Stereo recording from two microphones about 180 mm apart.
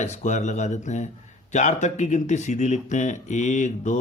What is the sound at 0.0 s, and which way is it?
Speech, 40° left (ahead or behind).